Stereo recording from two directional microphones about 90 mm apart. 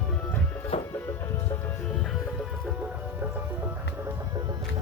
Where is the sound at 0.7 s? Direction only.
90° left.